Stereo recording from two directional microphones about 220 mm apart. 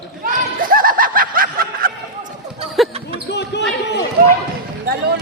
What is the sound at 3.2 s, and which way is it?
Basketball bounce, 50° left (ahead or behind).